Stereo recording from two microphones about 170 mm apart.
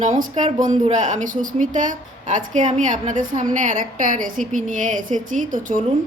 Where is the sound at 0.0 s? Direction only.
45° right (ahead or behind).